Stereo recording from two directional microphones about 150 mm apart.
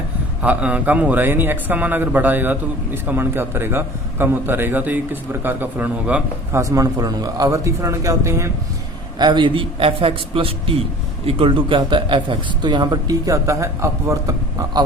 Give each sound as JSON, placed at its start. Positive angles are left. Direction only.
{"t": 0.4, "sound": "speech", "side_deg": -10}
{"t": 6.6, "sound": "a man's voice", "side_deg": -20}
{"t": 9.1, "sound": "a man's voice", "side_deg": -30}